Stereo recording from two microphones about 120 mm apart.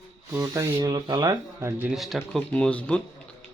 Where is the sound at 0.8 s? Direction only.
40° right (ahead or behind).